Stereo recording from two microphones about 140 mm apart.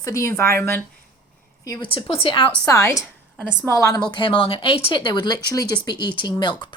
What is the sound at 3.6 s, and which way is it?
Speech, 20° left (ahead or behind).